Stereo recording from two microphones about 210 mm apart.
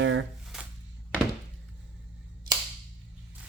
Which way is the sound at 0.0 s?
60° right (ahead or behind).